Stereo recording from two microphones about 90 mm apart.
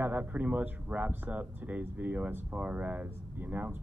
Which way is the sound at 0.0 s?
20° right (ahead or behind).